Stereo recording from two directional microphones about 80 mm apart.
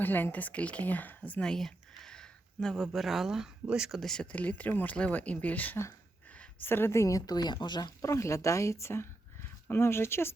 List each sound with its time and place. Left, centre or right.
0.0 s speech: left; by 4.0 s centre
4.0 s speech: centre
4.3 s a woman's voice: centre; by 7.9 s left
8.0 s a woman's voice: left